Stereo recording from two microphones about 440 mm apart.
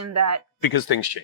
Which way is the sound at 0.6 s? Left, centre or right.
Left.